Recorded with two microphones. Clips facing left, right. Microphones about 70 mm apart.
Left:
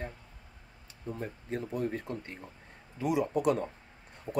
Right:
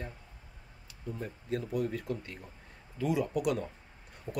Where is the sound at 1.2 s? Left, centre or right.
Left.